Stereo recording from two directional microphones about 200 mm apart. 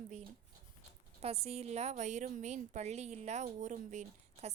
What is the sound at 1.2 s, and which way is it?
A woman's voice, 30° right (ahead or behind).